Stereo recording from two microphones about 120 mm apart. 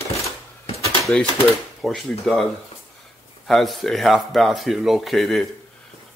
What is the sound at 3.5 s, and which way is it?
Speech, centre (ahead or behind).